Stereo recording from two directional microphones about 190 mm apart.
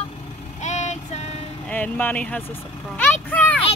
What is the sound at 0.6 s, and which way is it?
Vehicle, 35° left (ahead or behind).